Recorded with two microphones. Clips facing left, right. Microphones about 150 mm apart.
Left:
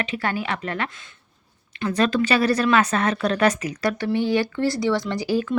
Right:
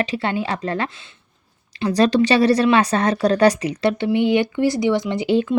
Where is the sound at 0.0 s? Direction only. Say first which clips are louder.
Right 4 dB; 30° right (ahead or behind).